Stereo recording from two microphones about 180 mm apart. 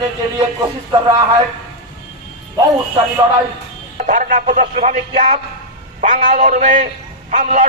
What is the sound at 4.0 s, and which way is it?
A man's voice, 45° right (ahead or behind).